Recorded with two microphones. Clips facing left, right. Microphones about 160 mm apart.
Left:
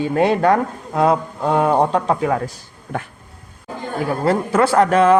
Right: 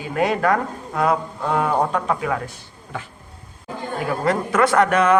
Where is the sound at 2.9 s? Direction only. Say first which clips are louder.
Left 6 dB; 50° left (ahead or behind).